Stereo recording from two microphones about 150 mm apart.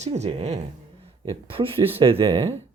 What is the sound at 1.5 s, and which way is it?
Speech, 35° right (ahead or behind).